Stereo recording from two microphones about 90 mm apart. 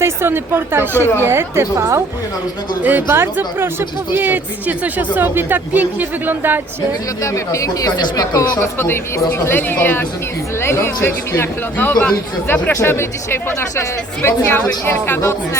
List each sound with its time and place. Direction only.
0.0 s speech: 25° right (ahead or behind)
2.8 s speech: 25° right (ahead or behind)
7.2 s speech: 35° left (ahead or behind)
8.8 s speech: 25° left (ahead or behind)